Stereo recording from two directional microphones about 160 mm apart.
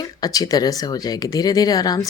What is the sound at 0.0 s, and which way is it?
Speech, 25° left (ahead or behind).